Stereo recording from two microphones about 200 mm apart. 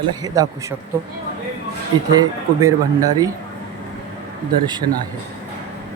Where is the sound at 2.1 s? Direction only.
20° right (ahead or behind).